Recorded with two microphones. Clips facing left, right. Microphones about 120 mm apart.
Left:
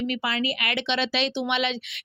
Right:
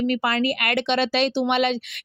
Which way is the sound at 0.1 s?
45° right (ahead or behind).